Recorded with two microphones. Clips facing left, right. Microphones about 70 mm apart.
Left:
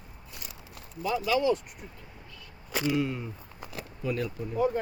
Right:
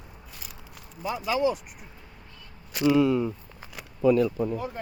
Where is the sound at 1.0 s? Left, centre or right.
Right.